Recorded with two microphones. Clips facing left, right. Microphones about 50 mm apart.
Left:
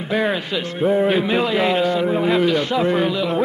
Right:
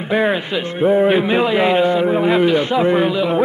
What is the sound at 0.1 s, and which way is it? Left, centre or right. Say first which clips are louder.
A man's voice: right 3 dB; centre.